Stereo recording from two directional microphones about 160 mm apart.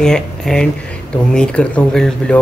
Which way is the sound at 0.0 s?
5° left (ahead or behind).